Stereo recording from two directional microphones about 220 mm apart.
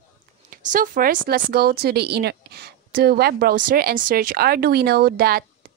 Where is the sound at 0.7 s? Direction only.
35° right (ahead or behind).